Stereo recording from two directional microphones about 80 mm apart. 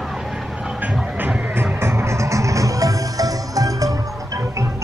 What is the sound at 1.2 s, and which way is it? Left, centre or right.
Music, right.